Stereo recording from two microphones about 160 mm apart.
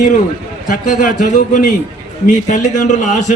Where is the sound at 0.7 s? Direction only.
55° left (ahead or behind).